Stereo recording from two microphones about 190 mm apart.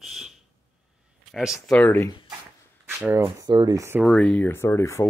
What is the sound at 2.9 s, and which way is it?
Speech, 10° right (ahead or behind).